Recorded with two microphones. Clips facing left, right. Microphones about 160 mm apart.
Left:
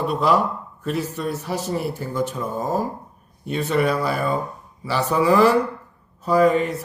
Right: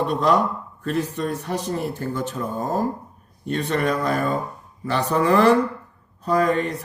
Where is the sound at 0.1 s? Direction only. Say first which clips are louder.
Even; 10° left (ahead or behind).